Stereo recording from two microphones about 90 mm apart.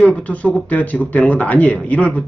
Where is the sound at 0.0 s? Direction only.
10° left (ahead or behind).